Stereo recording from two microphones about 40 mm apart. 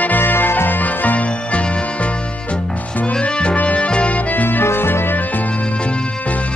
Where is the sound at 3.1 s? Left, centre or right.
Left.